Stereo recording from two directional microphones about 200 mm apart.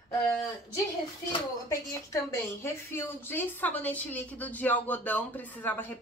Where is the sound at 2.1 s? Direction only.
10° left (ahead or behind).